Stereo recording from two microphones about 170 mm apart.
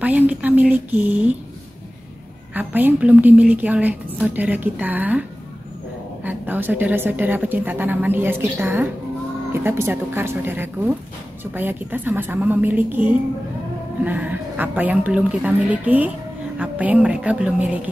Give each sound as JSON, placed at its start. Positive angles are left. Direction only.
{"t": 0.0, "sound": "a woman's voice", "side_deg": -10}
{"t": 2.5, "sound": "a woman's voice", "side_deg": -10}
{"t": 6.2, "sound": "a woman's voice", "side_deg": -10}